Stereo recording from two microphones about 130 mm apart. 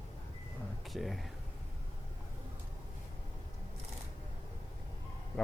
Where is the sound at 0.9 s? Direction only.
Centre (ahead or behind).